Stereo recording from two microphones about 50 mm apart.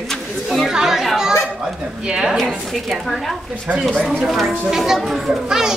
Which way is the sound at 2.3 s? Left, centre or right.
Centre.